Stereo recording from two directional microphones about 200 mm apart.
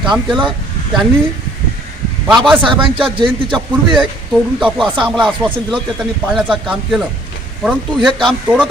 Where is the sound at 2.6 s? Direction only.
25° right (ahead or behind).